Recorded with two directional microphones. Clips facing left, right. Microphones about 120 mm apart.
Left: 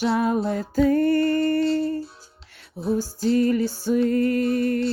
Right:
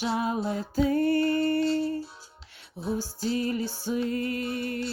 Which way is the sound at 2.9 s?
45° left (ahead or behind).